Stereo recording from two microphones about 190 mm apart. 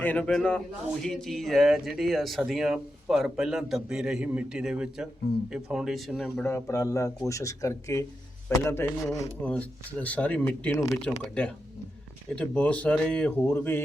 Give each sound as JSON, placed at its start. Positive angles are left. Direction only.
{"t": 0.0, "sound": "speech", "side_deg": 10}
{"t": 6.4, "sound": "speech", "side_deg": 15}